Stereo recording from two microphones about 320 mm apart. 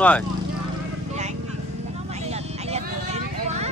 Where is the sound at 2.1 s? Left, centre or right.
Centre.